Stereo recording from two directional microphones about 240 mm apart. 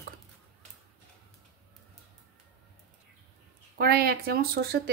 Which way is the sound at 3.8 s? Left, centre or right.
Right.